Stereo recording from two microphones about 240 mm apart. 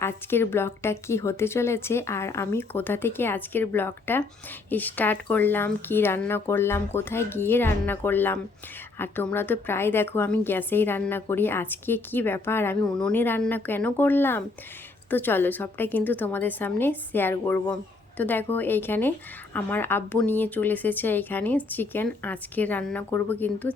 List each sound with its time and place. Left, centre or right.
0.0 s a woman's voice: centre